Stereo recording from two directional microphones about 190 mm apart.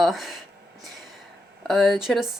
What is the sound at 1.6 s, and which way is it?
Speech, centre (ahead or behind).